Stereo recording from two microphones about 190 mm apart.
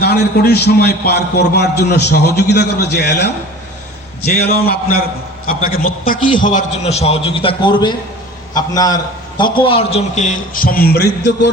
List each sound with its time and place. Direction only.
0.0 s a man's voice: 55° left (ahead or behind)